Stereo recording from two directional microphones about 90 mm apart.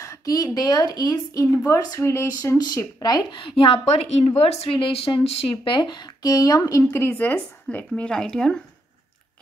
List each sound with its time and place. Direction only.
0.0 s speech: 40° left (ahead or behind)
2.6 s speech: 50° left (ahead or behind)
3.3 s a woman's voice: 80° left; by 6.0 s 55° left (ahead or behind)
6.2 s speech: 40° left (ahead or behind)
6.9 s a woman's voice: 25° left (ahead or behind)
7.6 s speech: 10° left (ahead or behind)